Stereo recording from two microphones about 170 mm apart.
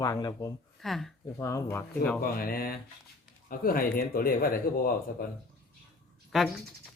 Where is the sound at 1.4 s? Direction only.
15° left (ahead or behind).